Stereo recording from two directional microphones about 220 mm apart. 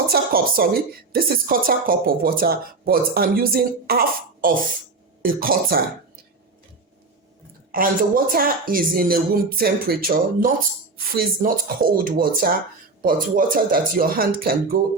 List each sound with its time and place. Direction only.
0.1 s a woman's voice: 45° right (ahead or behind)
7.7 s a woman's voice: 40° right (ahead or behind)